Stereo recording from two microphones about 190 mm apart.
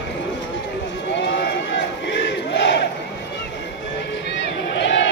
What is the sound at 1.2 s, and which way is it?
Battle cry, 70° left (ahead or behind).